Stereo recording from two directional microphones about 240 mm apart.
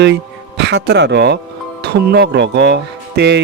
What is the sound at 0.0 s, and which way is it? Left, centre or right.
Speech, right.